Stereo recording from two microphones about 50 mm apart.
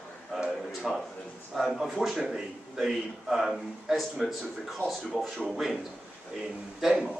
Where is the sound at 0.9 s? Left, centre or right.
Centre.